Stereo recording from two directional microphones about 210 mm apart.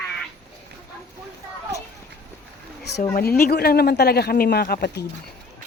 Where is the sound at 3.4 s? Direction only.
45° left (ahead or behind).